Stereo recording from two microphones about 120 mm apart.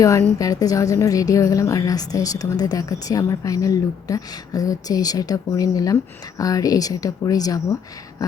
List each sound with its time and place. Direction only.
0.0 s a woman's voice: 25° left (ahead or behind)